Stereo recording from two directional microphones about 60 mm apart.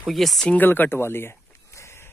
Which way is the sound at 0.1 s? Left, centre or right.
Centre.